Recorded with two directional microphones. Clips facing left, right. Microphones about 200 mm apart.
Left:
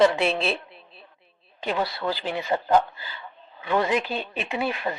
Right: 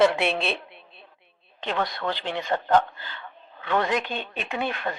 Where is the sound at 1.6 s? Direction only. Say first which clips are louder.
Left 1 dB; 10° left (ahead or behind).